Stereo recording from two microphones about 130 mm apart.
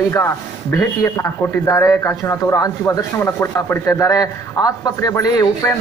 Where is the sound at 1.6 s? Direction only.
25° left (ahead or behind).